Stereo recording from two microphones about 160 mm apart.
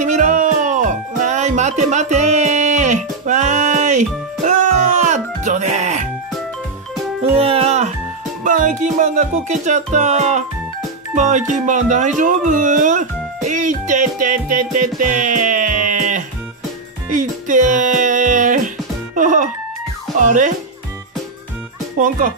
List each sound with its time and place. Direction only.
0.0 s music: 50° right (ahead or behind)
7.3 s music: 40° right (ahead or behind)
8.5 s music: 55° right (ahead or behind)
12.2 s speech: 55° right (ahead or behind)
15.0 s music: 55° right (ahead or behind)
20.2 s speech: 50° right (ahead or behind)
21.9 s speech: 55° right (ahead or behind)